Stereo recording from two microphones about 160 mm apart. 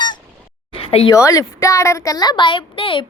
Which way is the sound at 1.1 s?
20° left (ahead or behind).